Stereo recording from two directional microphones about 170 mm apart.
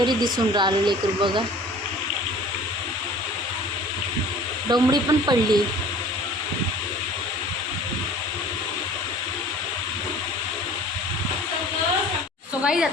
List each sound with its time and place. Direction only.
0.0 s speech: 25° right (ahead or behind)
4.7 s speech: 25° right (ahead or behind)
12.6 s a sound: 5° right (ahead or behind)